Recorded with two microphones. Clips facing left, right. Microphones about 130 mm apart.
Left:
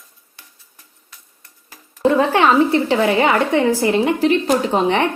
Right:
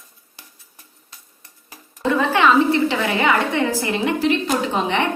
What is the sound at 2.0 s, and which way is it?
A woman's voice, 35° left (ahead or behind).